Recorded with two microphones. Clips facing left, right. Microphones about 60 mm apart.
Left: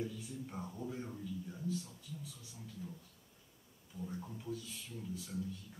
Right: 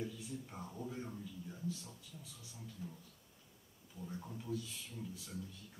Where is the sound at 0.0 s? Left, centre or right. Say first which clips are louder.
Left 2 dB; centre.